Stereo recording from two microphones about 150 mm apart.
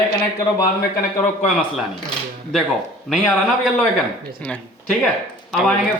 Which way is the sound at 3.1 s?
5° left (ahead or behind).